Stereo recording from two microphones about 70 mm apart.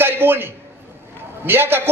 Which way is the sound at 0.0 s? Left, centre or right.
Right.